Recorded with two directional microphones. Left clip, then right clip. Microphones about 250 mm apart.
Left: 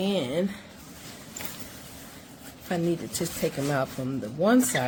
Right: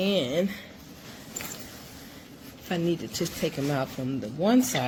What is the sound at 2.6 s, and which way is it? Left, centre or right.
Speech, left.